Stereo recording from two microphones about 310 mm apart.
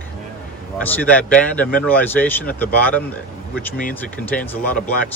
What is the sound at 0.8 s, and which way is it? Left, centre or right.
Speech, centre.